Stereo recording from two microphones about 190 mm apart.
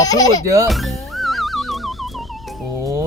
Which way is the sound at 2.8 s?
15° right (ahead or behind).